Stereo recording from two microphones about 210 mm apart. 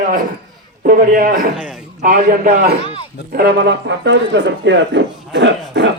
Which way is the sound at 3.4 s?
55° right (ahead or behind).